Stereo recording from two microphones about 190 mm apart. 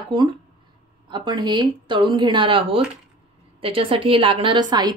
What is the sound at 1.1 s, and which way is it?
Speech, 25° right (ahead or behind).